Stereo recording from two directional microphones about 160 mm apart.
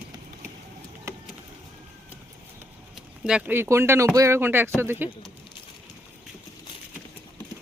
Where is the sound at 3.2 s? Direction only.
5° right (ahead or behind).